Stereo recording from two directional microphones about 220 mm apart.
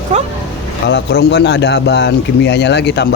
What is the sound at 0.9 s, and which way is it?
Speech, 55° left (ahead or behind).